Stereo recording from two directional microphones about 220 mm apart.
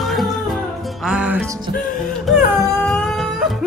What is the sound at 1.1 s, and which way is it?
Music, 5° right (ahead or behind).